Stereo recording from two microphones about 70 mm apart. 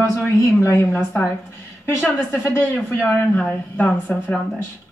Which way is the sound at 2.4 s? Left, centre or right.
Left.